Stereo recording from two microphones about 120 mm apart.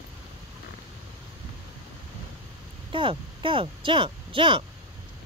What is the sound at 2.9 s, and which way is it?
Speech, 45° right (ahead or behind).